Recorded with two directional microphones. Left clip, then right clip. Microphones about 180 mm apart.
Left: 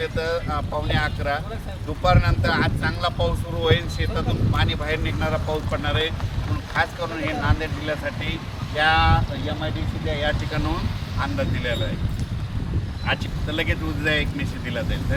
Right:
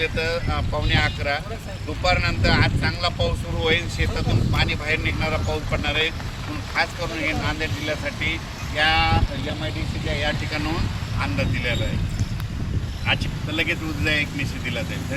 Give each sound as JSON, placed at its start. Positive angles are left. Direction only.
{"t": 0.0, "sound": "speech", "side_deg": 15}
{"t": 13.6, "sound": "speech", "side_deg": 20}